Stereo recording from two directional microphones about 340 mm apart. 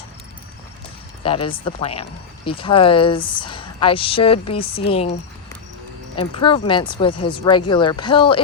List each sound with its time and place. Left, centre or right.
1.2 s speech: centre
6.1 s speech: centre